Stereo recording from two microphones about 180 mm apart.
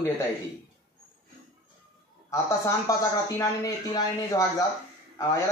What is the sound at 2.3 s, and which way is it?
A man's voice, 15° left (ahead or behind).